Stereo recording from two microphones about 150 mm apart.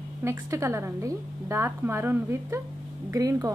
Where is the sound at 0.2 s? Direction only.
20° right (ahead or behind).